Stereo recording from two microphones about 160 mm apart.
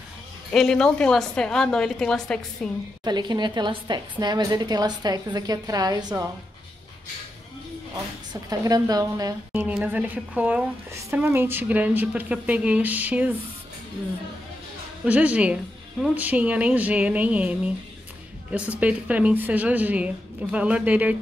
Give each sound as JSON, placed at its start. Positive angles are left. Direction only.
{"t": 0.5, "sound": "a woman's voice", "side_deg": 5}
{"t": 3.0, "sound": "a woman's voice", "side_deg": -25}
{"t": 8.3, "sound": "speech", "side_deg": -25}
{"t": 15.0, "sound": "speech", "side_deg": -10}